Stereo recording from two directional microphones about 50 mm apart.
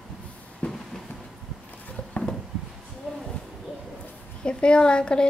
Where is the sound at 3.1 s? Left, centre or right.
Centre.